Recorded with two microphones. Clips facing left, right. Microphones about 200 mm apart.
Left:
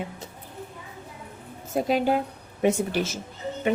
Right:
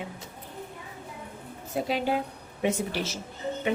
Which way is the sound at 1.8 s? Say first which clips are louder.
Left 4 dB; 45° left (ahead or behind).